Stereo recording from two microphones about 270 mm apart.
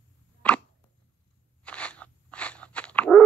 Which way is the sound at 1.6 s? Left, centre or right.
Centre.